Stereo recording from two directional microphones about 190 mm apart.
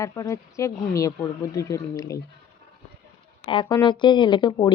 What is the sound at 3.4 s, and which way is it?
Speech, 25° left (ahead or behind).